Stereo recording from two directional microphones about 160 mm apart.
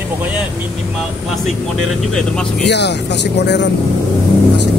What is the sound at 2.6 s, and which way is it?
Speech, 90° left.